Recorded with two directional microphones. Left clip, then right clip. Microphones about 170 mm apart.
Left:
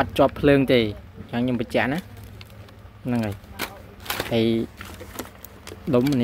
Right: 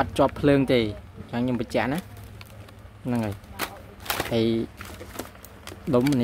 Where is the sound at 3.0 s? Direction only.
5° right (ahead or behind).